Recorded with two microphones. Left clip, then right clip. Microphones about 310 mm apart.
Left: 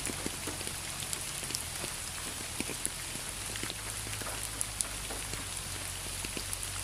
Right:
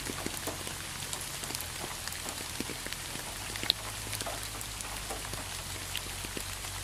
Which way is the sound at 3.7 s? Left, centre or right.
Right.